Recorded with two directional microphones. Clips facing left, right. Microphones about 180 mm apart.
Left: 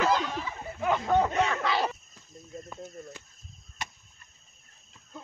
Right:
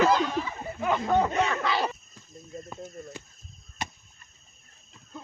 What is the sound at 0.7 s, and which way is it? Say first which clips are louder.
Speech: even; centre (ahead or behind).